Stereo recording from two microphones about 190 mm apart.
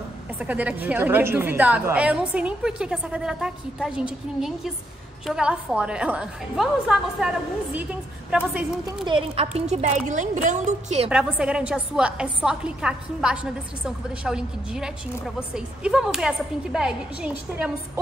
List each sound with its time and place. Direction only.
0.4 s a woman's voice: 10° right (ahead or behind)
5.2 s a woman's voice: 5° right (ahead or behind)
9.0 s a woman's voice: 25° right (ahead or behind)
11.1 s a woman's voice: 5° right (ahead or behind)